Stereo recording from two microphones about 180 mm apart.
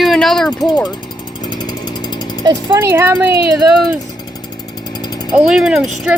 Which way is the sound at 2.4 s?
15° right (ahead or behind).